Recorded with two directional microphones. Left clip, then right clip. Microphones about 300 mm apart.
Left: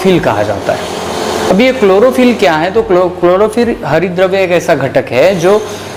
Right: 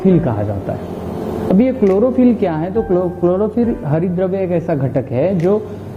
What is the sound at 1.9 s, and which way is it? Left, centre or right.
Speech, left.